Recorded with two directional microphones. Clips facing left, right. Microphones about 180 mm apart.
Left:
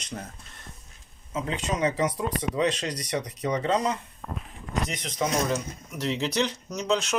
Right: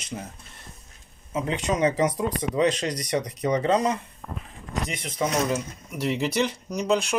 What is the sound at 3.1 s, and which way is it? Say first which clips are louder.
Speech: right 4 dB; 30° right (ahead or behind).